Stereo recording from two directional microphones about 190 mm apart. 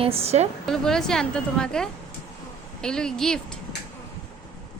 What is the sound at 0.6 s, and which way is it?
Speech, 5° left (ahead or behind).